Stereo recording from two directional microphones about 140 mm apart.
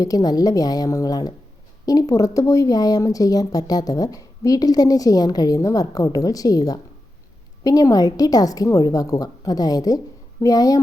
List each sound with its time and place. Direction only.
0.0 s speech: 25° left (ahead or behind)